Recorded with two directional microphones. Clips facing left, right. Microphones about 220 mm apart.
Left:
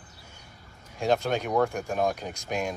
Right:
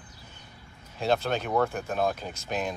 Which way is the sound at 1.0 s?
15° left (ahead or behind).